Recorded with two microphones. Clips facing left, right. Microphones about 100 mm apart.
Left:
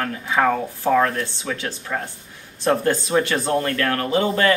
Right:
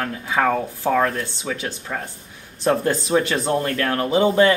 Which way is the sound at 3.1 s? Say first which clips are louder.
Right 1 dB; 20° right (ahead or behind).